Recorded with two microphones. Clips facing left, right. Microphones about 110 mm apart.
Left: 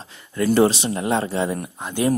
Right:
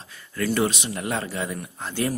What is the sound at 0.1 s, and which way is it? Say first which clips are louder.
Speech: left 6 dB; 25° left (ahead or behind).